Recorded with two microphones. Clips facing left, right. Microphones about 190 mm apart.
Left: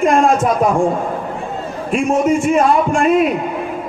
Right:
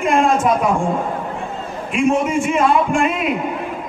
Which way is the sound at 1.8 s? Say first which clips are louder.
Left 2 dB; 40° left (ahead or behind).